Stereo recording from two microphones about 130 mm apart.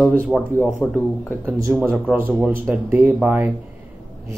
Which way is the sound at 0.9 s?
15° right (ahead or behind).